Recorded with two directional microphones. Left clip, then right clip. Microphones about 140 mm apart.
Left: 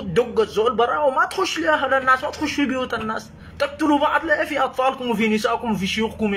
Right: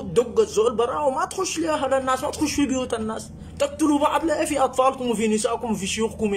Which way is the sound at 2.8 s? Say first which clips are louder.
Left 2 dB; 15° right (ahead or behind).